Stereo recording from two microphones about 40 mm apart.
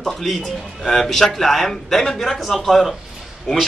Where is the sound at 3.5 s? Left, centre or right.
Centre.